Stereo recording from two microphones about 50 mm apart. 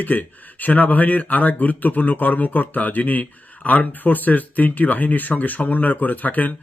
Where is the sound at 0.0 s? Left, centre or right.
Left.